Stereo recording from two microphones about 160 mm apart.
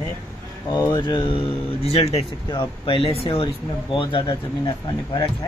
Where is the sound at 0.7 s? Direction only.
20° left (ahead or behind); by 3.5 s 35° left (ahead or behind).